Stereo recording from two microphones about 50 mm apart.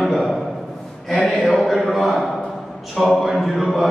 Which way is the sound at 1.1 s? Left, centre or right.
Left.